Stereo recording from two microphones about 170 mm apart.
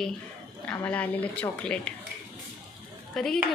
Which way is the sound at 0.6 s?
5° left (ahead or behind).